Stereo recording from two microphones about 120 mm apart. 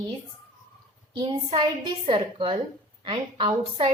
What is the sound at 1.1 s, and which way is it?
A woman's voice, 40° right (ahead or behind).